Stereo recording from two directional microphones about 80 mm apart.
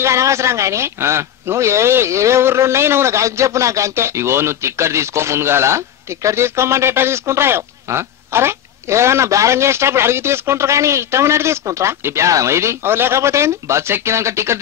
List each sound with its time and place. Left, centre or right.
0.0 s a man's voice: right